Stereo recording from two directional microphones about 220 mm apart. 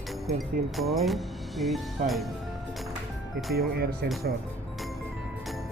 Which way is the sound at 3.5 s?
45° right (ahead or behind).